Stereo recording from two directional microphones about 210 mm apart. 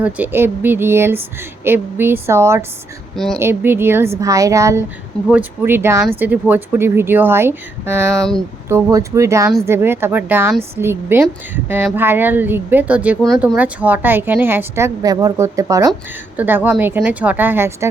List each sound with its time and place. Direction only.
0.0 s a woman's voice: 10° right (ahead or behind)
8.1 s speech: centre (ahead or behind)
8.7 s a woman's voice: 15° right (ahead or behind)